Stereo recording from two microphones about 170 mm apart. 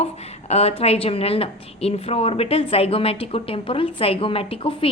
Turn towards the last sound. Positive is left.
turn(degrees=35)  # may be behind; listen again after turning